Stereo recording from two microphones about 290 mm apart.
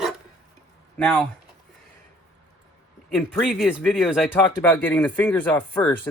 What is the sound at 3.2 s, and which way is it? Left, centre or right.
Speech, centre.